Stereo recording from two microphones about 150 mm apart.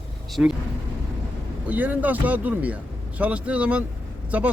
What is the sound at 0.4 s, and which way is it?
Speech, 10° right (ahead or behind).